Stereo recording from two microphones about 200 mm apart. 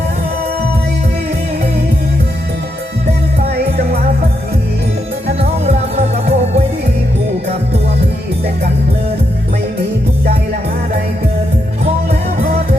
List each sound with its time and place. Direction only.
5.4 s music: 35° right (ahead or behind)